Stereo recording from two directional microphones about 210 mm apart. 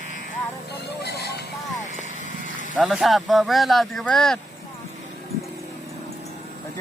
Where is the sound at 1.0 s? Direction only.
50° left (ahead or behind).